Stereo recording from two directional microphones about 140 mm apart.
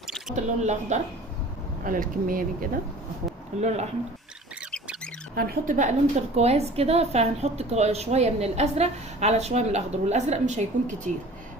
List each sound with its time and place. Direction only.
0.3 s speech: 55° right (ahead or behind)
1.8 s speech: 80° right
3.6 s a woman's voice: 55° right (ahead or behind)
5.3 s a woman's voice: 80° right; by 11.1 s 60° right (ahead or behind)